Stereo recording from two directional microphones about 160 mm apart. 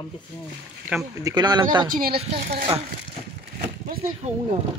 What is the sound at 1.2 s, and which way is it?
Speech, 25° right (ahead or behind).